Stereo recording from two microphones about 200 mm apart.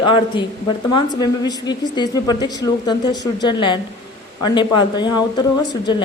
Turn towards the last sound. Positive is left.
turn(degrees=20)  # may be behind; listen again after turning